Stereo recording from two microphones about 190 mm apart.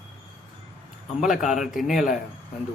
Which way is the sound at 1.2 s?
Centre (ahead or behind).